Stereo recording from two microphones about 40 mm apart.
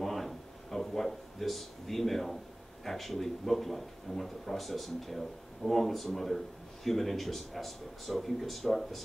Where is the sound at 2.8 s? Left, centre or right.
Centre.